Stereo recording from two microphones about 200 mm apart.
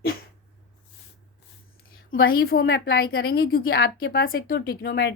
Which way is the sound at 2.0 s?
50° left (ahead or behind).